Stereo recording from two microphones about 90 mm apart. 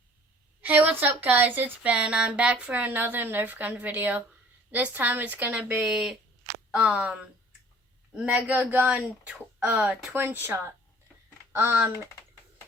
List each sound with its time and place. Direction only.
0.6 s a woman's voice: 20° right (ahead or behind)
8.1 s a woman's voice: 10° right (ahead or behind)
11.5 s speech: 25° right (ahead or behind)